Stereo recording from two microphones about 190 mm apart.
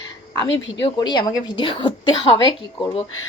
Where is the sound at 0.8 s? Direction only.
20° left (ahead or behind).